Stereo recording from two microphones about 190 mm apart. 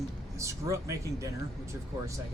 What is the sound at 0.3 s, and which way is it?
Speech, 15° right (ahead or behind).